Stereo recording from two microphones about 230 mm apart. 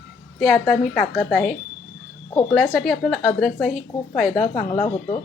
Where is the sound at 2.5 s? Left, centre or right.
Centre.